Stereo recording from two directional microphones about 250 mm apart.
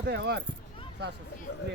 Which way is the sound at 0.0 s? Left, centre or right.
Right.